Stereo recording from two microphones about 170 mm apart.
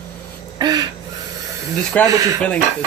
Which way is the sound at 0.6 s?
25° right (ahead or behind).